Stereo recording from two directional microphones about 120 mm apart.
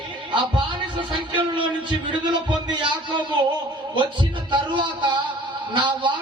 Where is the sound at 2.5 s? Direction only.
40° right (ahead or behind).